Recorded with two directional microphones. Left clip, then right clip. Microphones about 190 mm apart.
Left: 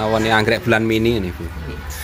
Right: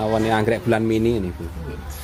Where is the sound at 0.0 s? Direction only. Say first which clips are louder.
Left 3 dB; 15° right (ahead or behind).